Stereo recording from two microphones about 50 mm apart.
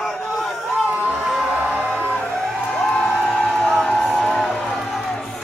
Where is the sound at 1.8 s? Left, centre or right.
Left.